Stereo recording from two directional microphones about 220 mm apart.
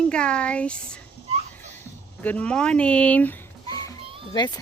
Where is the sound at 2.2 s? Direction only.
5° left (ahead or behind).